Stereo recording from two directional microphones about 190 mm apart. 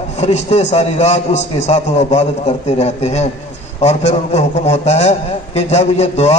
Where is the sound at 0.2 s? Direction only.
35° left (ahead or behind).